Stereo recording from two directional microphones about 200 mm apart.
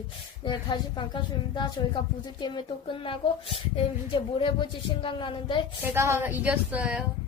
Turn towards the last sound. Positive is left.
turn(degrees=-5)  # may be behind; listen again after turning